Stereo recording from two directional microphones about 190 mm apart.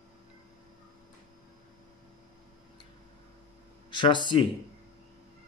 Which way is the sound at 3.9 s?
25° left (ahead or behind).